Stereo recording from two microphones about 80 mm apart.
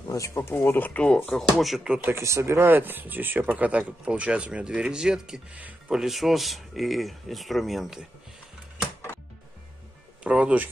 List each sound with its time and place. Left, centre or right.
0.1 s speech: left
0.4 s speech: left
1.3 s speech: centre
2.0 s speech: right; by 5.6 s centre
5.6 s a sound: centre
5.9 s speech: centre
10.2 s speech: centre